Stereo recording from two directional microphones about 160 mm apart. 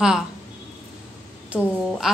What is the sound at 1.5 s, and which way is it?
Speech, 5° right (ahead or behind).